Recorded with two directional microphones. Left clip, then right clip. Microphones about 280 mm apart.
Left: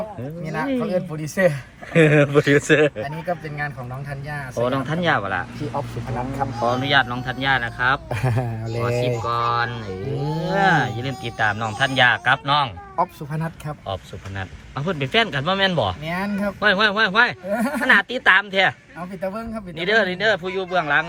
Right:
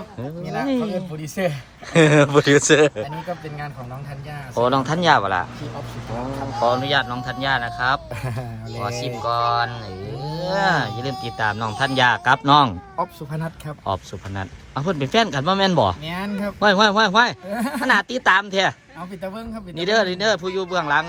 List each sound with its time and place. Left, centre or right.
0.6 s speech: centre
4.5 s speech: centre
6.6 s speech: centre
8.1 s speech: left
9.2 s speech: centre
13.0 s speech: centre
13.8 s speech: centre